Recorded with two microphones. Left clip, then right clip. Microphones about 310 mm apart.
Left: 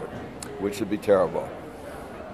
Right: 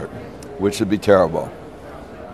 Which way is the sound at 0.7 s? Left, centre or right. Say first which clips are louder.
Right 7 dB; right.